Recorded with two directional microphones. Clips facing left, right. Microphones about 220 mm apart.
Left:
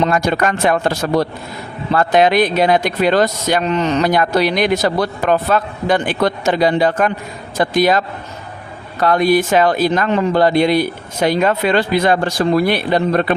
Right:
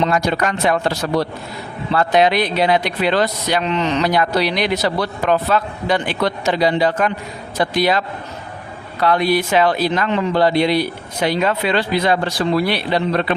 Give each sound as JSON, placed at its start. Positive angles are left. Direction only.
{"t": 0.0, "sound": "speech", "side_deg": 50}